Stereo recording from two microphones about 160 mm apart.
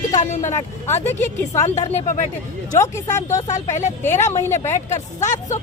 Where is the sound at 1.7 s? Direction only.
40° left (ahead or behind).